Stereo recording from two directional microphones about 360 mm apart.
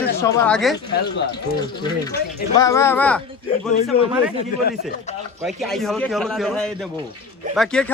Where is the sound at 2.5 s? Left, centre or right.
Centre.